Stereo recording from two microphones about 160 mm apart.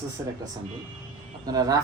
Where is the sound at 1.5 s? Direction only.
25° right (ahead or behind).